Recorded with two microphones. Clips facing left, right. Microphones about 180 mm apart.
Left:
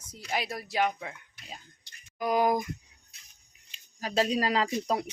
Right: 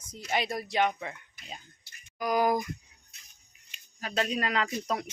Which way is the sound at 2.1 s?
25° left (ahead or behind).